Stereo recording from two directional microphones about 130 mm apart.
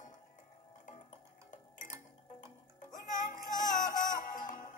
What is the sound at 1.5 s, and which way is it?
Music, 70° left (ahead or behind).